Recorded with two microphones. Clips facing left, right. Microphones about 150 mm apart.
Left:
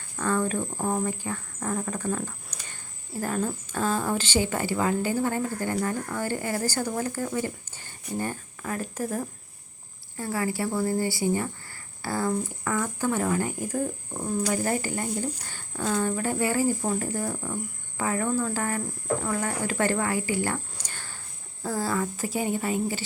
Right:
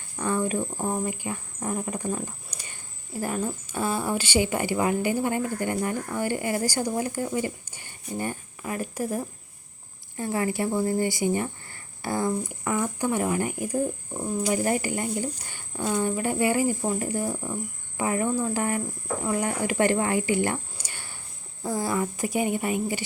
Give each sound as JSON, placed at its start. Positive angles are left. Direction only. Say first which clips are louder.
{"t": 0.2, "sound": "speech", "louder": "even", "side_deg": -15}
{"t": 14.4, "sound": "speech", "louder": "right 3 dB", "side_deg": -15}
{"t": 20.7, "sound": "cricket", "louder": "even", "side_deg": -10}
{"t": 21.6, "sound": "speech", "louder": "right 1 dB", "side_deg": -15}